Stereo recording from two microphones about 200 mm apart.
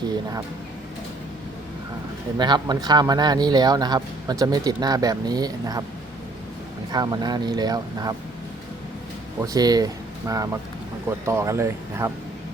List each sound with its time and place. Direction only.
2.4 s speech: 20° right (ahead or behind)
6.9 s speech: 20° right (ahead or behind)
9.4 s speech: 20° right (ahead or behind)